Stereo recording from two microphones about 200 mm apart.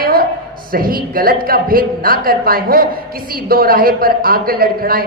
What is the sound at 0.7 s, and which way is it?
A woman's voice, 45° right (ahead or behind).